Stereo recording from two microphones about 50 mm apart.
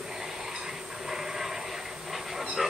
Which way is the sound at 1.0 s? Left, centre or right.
Centre.